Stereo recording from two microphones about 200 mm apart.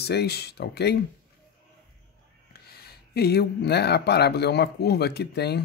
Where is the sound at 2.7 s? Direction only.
50° left (ahead or behind).